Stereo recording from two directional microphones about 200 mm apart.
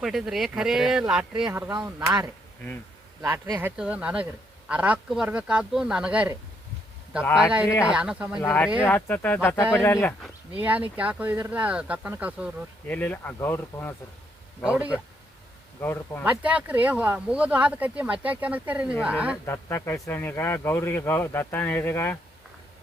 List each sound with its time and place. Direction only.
0.0 s speech: centre (ahead or behind)
1.5 s speech: 15° right (ahead or behind)
3.2 s speech: 15° right (ahead or behind)
7.3 s speech: 5° right (ahead or behind)
8.4 s speech: 15° left (ahead or behind)
10.5 s speech: 5° right (ahead or behind)
12.9 s speech: 10° left (ahead or behind)
14.6 s speech: 5° right (ahead or behind)
15.8 s speech: 10° left (ahead or behind)
16.2 s speech: 5° right (ahead or behind)
19.5 s speech: 10° left (ahead or behind)